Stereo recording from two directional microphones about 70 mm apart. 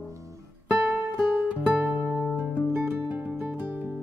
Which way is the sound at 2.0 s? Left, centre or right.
Centre.